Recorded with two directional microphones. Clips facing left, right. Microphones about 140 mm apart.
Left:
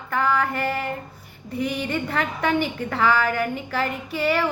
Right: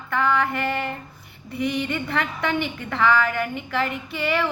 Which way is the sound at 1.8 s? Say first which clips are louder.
Even; 40° left (ahead or behind).